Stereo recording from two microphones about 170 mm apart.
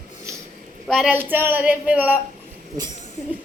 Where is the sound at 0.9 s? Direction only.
Centre (ahead or behind).